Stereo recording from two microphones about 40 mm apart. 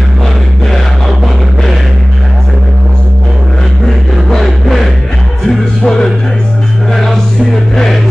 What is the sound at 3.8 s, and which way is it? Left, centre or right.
Music, centre.